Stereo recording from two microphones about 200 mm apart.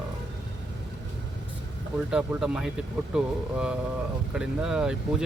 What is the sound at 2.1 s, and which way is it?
Speech, 5° right (ahead or behind).